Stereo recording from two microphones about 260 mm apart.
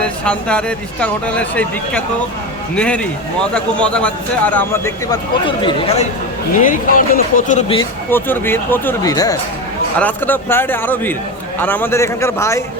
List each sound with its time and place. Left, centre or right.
0.0 s a man's voice: centre
6.6 s speech: left
7.8 s speech: centre